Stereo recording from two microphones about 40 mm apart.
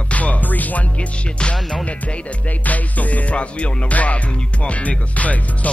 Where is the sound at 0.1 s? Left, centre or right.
Left.